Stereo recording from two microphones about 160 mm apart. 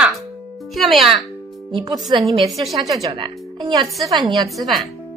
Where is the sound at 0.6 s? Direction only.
Centre (ahead or behind).